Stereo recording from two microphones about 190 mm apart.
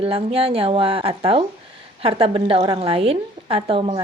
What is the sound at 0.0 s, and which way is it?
A woman's voice, 30° right (ahead or behind).